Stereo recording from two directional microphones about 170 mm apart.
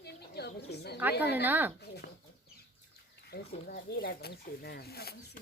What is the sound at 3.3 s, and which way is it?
Speech, 65° left (ahead or behind).